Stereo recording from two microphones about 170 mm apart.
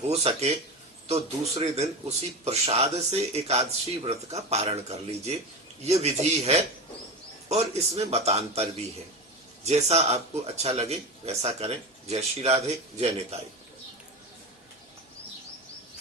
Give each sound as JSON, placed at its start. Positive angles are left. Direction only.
{"t": 0.1, "sound": "a man's voice", "side_deg": -35}